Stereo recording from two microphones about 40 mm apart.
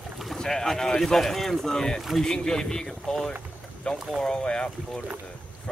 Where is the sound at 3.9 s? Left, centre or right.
Left.